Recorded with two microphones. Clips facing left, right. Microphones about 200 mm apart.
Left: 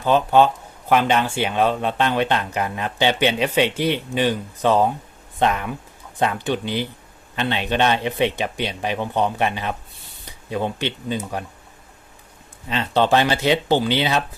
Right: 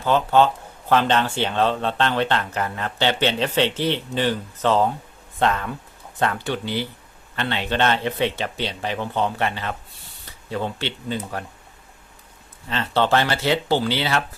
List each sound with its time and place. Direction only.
0.0 s speech: 15° left (ahead or behind)
12.6 s speech: 15° left (ahead or behind)